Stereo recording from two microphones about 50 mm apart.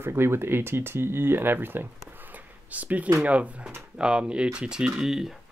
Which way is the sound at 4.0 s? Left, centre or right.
Centre.